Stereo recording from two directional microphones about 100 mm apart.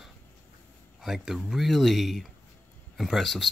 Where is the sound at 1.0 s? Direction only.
5° right (ahead or behind).